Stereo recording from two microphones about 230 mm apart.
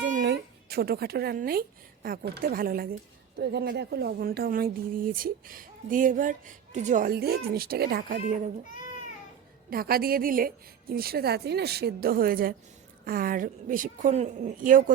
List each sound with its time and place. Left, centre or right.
0.2 s music: right
2.0 s speech: right
9.6 s speech: right